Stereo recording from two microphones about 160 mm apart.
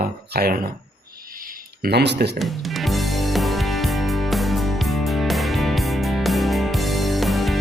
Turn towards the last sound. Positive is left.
turn(degrees=0)  # may be behind; listen again after turning